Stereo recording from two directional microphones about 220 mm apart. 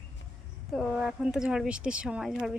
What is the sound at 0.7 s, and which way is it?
Speech, 5° right (ahead or behind).